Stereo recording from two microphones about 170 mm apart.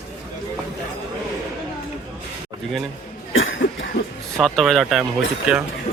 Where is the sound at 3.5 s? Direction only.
90° left.